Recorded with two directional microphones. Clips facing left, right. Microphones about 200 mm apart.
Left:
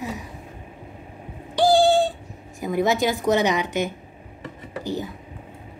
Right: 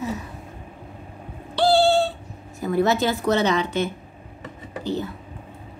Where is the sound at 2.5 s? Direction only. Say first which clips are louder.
Right 1 dB; 15° left (ahead or behind).